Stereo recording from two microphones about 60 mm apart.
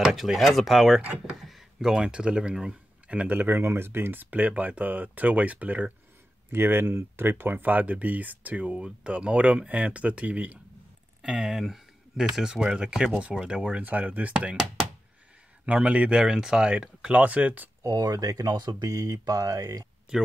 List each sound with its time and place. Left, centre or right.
0.0 s speech: centre; by 5.9 s right
6.5 s speech: right
11.2 s speech: centre
13.6 s speech: right
15.6 s speech: right
17.8 s speech: right
20.1 s speech: centre